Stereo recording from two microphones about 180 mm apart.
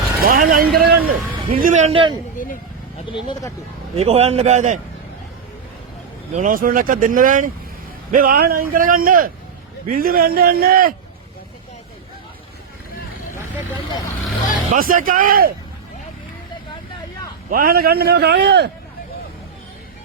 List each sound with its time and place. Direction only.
0.2 s a man's voice: 50° right (ahead or behind); by 2.1 s 30° right (ahead or behind)
3.1 s speech: 25° left (ahead or behind)
3.9 s a man's voice: 35° right (ahead or behind)
6.3 s a man's voice: 50° right (ahead or behind)
14.7 s a man's voice: 50° right (ahead or behind)
17.5 s a man's voice: 55° right (ahead or behind)